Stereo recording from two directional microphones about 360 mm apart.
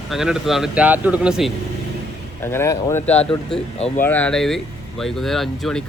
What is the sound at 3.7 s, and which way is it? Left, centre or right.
Speech, centre.